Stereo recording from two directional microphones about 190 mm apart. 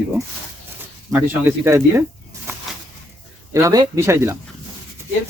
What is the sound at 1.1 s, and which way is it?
Speech, 10° right (ahead or behind).